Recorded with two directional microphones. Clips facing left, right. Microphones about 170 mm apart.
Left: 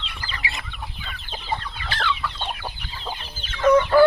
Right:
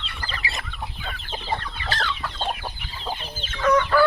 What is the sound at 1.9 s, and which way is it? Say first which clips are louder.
Chicken: left 2 dB; 40° right (ahead or behind).